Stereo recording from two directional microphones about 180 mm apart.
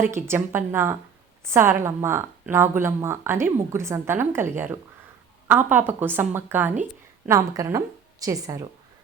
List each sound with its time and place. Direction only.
0.3 s a woman's voice: 15° right (ahead or behind)